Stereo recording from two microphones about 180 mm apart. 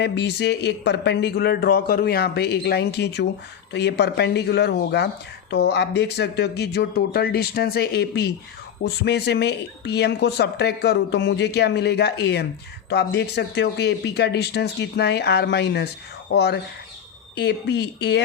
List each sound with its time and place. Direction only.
0.0 s speech: 65° left (ahead or behind)